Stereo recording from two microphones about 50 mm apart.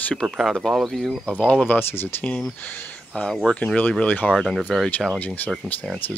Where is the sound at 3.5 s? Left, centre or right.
Centre.